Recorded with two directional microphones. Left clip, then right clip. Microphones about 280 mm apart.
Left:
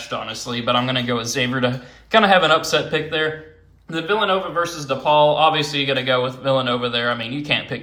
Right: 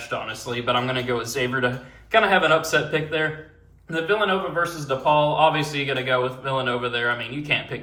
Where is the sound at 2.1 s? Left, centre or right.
Centre.